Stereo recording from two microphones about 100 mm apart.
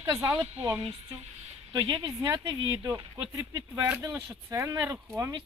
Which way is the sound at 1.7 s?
40° right (ahead or behind).